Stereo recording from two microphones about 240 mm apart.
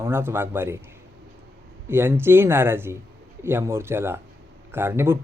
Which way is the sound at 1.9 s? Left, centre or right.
Centre.